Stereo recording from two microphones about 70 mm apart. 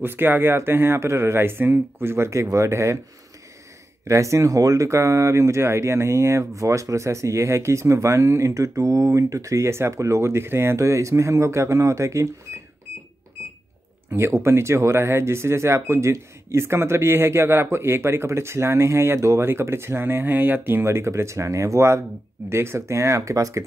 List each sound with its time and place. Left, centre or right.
0.0 s speech: right
4.1 s speech: right
14.1 s speech: right